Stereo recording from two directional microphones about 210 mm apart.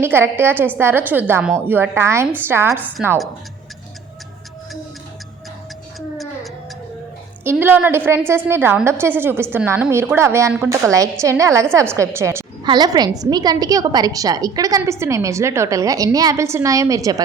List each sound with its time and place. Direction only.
0.0 s a woman's voice: 10° right (ahead or behind)
7.4 s a woman's voice: 10° right (ahead or behind)